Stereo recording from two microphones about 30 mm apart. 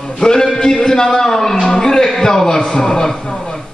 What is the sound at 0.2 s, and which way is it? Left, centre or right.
Music, left.